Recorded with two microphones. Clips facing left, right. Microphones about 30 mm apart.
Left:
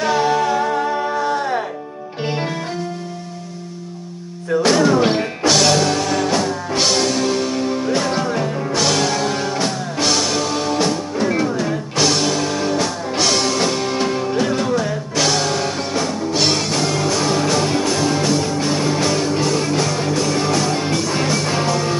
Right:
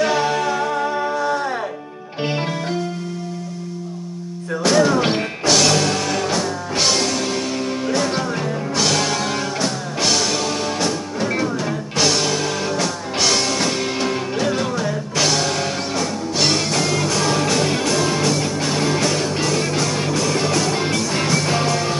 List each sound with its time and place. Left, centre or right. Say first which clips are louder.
0.0 s music: left 2 dB; centre
1.2 s music: left 1 dB; centre
2.2 s music: even; centre
4.6 s music: even; centre
5.0 s music: left 3 dB; centre
5.4 s music: left 1 dB; centre
10.8 s music: left 3 dB; centre
15.9 s music: left 2 dB; centre